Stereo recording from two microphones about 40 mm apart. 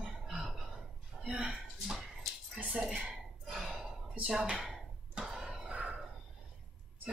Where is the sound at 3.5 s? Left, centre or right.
Centre.